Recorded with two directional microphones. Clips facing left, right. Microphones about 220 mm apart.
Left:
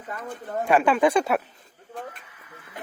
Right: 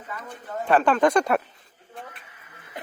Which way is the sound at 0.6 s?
10° left (ahead or behind).